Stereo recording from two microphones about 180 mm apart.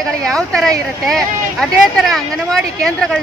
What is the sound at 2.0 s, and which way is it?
Speech, centre (ahead or behind).